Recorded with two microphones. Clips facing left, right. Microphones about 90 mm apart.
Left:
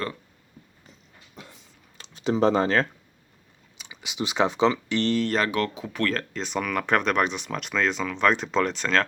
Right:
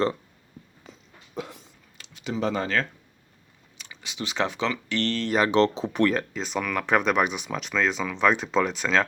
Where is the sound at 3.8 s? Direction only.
15° left (ahead or behind).